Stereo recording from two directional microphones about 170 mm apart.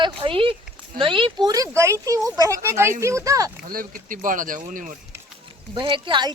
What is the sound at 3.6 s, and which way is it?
Speech, 55° right (ahead or behind).